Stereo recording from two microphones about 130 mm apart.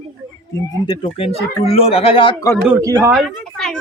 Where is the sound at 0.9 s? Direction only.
45° left (ahead or behind).